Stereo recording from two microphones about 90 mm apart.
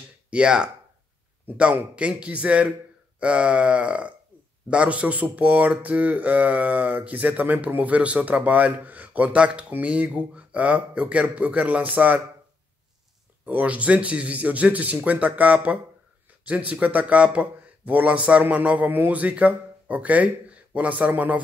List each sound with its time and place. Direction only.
0.3 s speech: 10° right (ahead or behind)
13.5 s speech: 15° right (ahead or behind)